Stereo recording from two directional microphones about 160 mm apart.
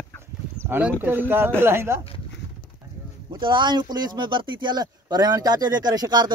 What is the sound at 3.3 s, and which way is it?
Speech, 30° right (ahead or behind).